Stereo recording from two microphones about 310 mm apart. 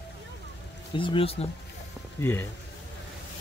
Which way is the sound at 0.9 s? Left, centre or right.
Centre.